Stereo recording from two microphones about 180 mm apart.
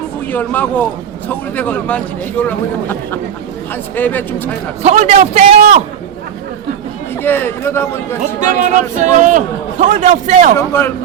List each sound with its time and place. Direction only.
0.3 s speech: 10° left (ahead or behind)
4.8 s a man's voice: 40° right (ahead or behind)
7.2 s speech: 10° left (ahead or behind)
8.2 s speech: 45° right (ahead or behind)
10.6 s speech: 15° left (ahead or behind)